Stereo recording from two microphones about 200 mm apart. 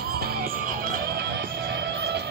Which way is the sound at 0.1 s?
50° right (ahead or behind).